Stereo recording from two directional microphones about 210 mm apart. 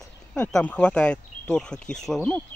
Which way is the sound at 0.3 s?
5° left (ahead or behind).